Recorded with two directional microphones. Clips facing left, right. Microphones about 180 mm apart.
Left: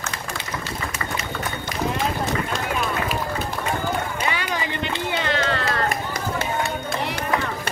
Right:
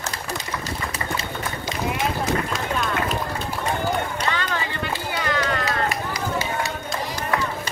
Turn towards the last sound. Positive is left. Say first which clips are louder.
# left 2 dB
turn(degrees=55)  # may be behind; listen again after turning